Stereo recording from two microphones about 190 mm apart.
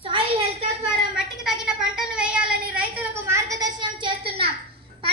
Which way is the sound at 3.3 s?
20° right (ahead or behind).